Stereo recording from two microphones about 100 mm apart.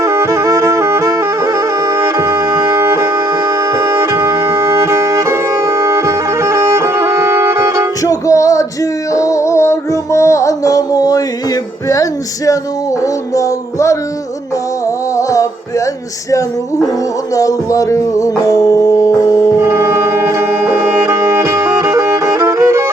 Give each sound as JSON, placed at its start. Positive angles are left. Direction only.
{"t": 0.0, "sound": "music", "side_deg": -30}
{"t": 8.0, "sound": "music", "side_deg": 35}
{"t": 13.0, "sound": "music", "side_deg": 30}
{"t": 15.1, "sound": "music", "side_deg": 30}
{"t": 17.3, "sound": "music", "side_deg": 35}
{"t": 19.5, "sound": "music", "side_deg": -30}